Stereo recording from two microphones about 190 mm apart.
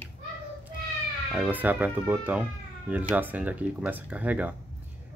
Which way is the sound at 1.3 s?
10° right (ahead or behind).